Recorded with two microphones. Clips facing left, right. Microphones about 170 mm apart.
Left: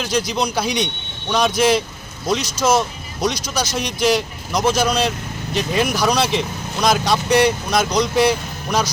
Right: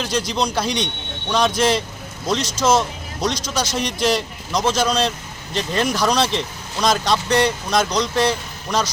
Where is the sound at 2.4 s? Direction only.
25° right (ahead or behind).